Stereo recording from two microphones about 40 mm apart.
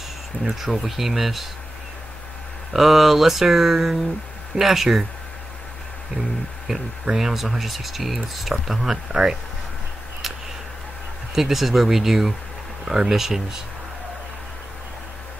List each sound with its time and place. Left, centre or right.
0.4 s speech: centre
2.7 s speech: centre
6.7 s speech: centre
11.3 s speech: centre